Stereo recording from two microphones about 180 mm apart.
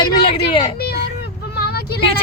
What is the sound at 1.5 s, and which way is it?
Vehicle, 60° left (ahead or behind).